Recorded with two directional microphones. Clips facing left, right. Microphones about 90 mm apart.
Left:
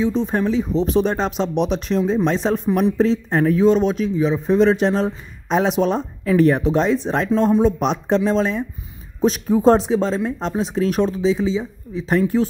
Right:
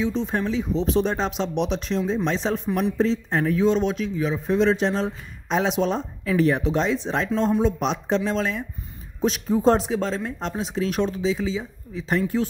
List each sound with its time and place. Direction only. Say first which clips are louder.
0.0 s speech: left 5 dB; 40° left (ahead or behind)
0.9 s speech: left 5 dB; 60° left (ahead or behind)
3.3 s speech: left 5 dB; 40° left (ahead or behind)
4.2 s a man's voice: left 6 dB; 30° left (ahead or behind)
4.6 s speech: left 4 dB; 50° left (ahead or behind)
8.3 s speech: left 6 dB; 30° left (ahead or behind)
9.8 s speech: left 6 dB; 30° left (ahead or behind)
11.3 s a man's voice: left 6 dB; 25° left (ahead or behind)
12.1 s speech: left 5 dB; 45° left (ahead or behind)